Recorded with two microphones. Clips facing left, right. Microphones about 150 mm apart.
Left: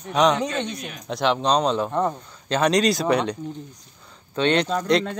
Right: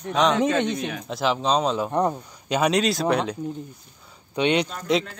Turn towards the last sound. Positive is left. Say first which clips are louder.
# left 2 dB
turn(degrees=-10)  # may be behind; listen again after turning